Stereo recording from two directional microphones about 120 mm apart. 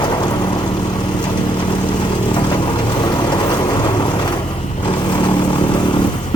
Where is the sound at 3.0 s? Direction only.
40° left (ahead or behind).